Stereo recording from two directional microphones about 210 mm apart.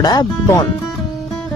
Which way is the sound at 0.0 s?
20° left (ahead or behind).